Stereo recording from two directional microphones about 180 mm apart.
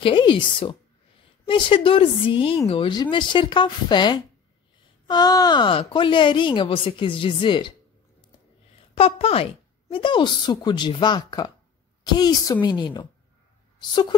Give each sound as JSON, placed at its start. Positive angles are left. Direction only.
{"t": 0.0, "sound": "speech", "side_deg": 25}
{"t": 8.9, "sound": "speech", "side_deg": 35}